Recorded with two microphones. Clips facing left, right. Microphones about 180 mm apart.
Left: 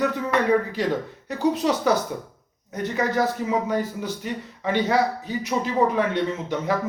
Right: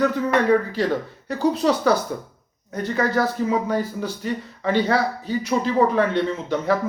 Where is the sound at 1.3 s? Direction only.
15° left (ahead or behind).